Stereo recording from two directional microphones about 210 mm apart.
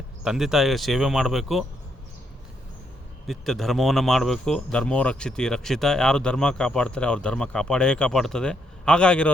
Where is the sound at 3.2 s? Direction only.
Centre (ahead or behind).